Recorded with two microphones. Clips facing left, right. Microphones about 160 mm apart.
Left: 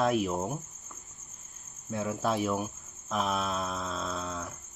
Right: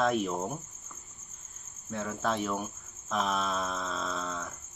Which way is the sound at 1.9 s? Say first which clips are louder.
Left 2 dB; 10° left (ahead or behind).